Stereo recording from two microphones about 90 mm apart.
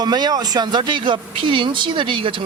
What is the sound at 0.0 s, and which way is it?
Speech, 50° right (ahead or behind).